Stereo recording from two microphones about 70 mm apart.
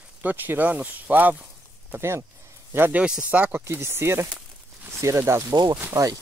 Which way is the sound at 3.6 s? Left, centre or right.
Right.